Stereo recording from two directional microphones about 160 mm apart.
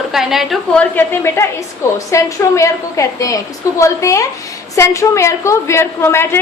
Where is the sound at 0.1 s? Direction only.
Centre (ahead or behind).